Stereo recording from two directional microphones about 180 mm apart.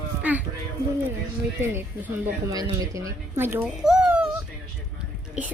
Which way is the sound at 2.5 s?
20° right (ahead or behind).